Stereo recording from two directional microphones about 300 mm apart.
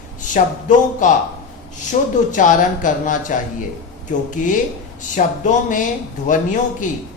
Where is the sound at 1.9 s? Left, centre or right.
Left.